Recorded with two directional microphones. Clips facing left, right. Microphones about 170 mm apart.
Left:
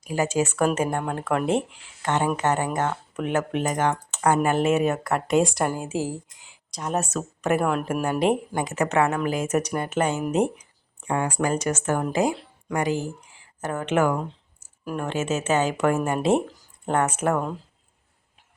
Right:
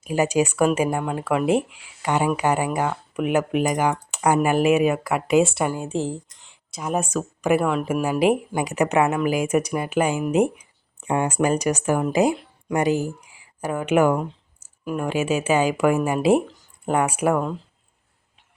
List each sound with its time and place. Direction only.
0.1 s a woman's voice: 15° right (ahead or behind)
11.0 s speech: 20° right (ahead or behind)